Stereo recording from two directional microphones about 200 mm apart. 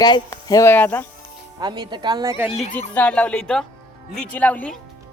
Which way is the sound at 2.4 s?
Centre (ahead or behind).